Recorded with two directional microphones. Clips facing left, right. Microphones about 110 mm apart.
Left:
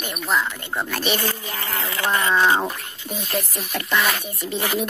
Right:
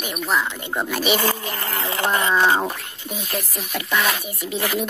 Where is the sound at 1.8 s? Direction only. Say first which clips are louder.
Right 1 dB; 30° right (ahead or behind).